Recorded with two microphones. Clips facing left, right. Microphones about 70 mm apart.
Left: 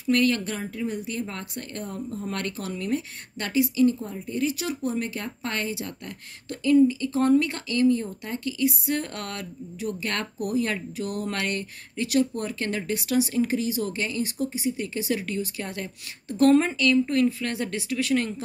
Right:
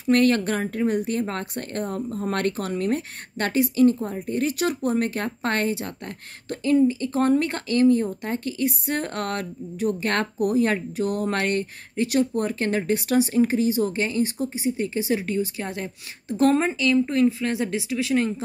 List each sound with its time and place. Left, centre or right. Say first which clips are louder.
0.0 s speech: right 4 dB; right; by 18.3 s centre